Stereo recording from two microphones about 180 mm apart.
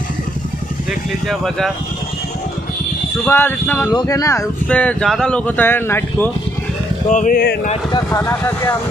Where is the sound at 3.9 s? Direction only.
20° left (ahead or behind).